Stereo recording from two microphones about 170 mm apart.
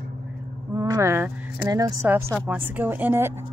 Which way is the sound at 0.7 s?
20° right (ahead or behind).